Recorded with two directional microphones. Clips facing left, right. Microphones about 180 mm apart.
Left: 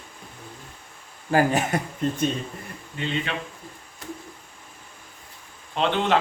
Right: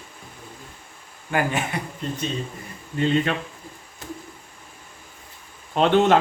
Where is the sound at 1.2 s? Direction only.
35° left (ahead or behind).